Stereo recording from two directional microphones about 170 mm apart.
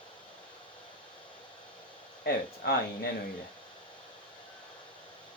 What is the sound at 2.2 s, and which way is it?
Speech, 65° left (ahead or behind).